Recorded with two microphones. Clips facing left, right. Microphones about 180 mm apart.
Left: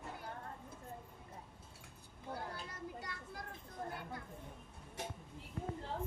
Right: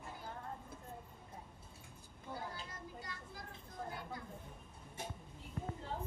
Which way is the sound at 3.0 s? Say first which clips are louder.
Left 2 dB; 60° left (ahead or behind).